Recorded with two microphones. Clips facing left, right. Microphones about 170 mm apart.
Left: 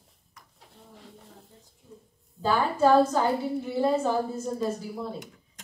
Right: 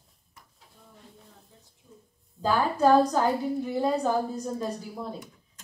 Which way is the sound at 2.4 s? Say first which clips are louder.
Even; centre (ahead or behind).